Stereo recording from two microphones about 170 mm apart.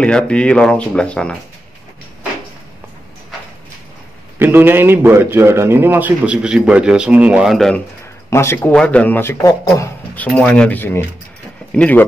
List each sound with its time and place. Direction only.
0.0 s speech: 5° left (ahead or behind)
4.4 s a man's voice: 10° right (ahead or behind)
8.3 s speech: 15° left (ahead or behind)